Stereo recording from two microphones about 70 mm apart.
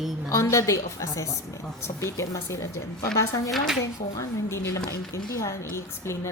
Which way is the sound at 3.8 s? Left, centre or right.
Left.